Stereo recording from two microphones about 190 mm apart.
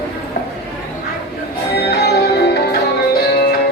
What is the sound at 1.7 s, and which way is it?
Music, 60° left (ahead or behind).